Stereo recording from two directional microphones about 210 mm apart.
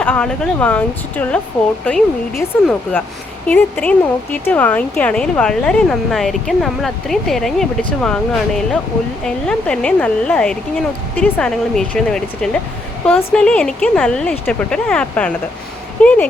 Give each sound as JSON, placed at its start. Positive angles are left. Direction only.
{"t": 0.0, "sound": "speech", "side_deg": 5}